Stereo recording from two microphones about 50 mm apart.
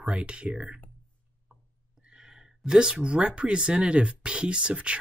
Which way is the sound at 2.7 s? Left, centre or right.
Centre.